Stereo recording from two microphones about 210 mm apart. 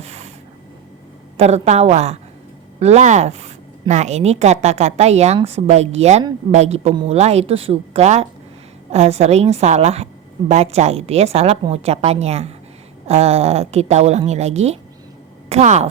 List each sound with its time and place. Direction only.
0.0 s snort: 30° right (ahead or behind)
1.4 s a woman's voice: 30° right (ahead or behind)